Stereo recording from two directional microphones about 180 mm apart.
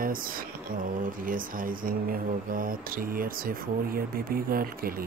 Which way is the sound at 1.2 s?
50° right (ahead or behind).